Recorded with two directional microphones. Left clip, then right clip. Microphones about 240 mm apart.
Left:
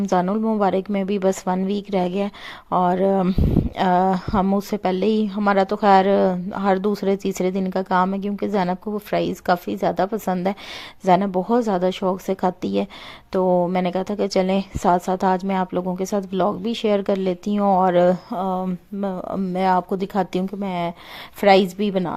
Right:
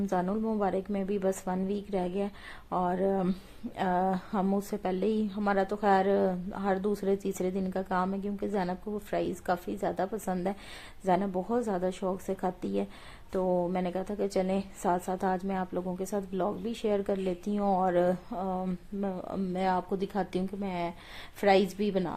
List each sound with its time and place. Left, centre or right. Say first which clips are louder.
0.0 s a woman's voice: left 10 dB; left